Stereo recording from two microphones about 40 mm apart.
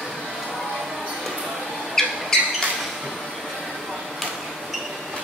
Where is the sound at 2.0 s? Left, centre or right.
Centre.